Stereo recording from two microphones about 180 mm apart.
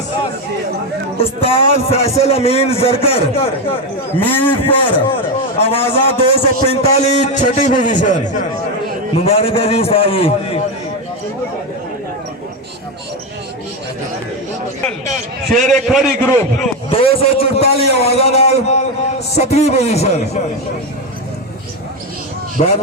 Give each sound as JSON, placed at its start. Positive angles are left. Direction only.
{"t": 1.2, "sound": "a man's voice", "side_deg": 30}
{"t": 4.3, "sound": "a man's voice", "side_deg": 10}
{"t": 4.6, "sound": "a man's voice", "side_deg": 30}
{"t": 9.1, "sound": "a man's voice", "side_deg": 35}
{"t": 15.7, "sound": "a man's voice", "side_deg": 0}
{"t": 16.9, "sound": "a man's voice", "side_deg": 30}
{"t": 22.6, "sound": "a man's voice", "side_deg": 40}